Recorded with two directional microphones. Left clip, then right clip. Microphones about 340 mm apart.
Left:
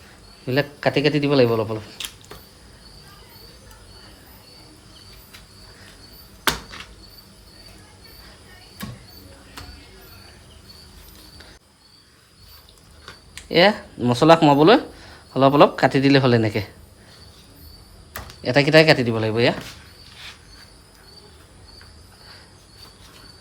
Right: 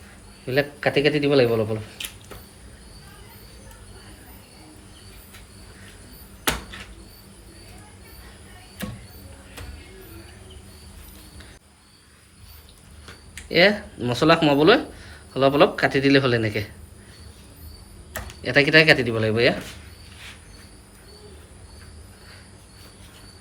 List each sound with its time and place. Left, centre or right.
0.4 s speech: left
13.3 s speech: left
18.4 s speech: centre